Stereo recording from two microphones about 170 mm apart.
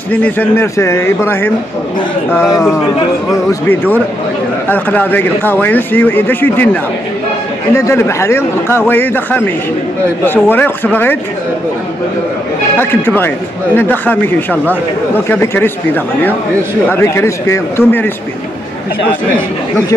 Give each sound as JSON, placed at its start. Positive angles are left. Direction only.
{"t": 0.1, "sound": "speech", "side_deg": 10}
{"t": 12.7, "sound": "speech", "side_deg": 10}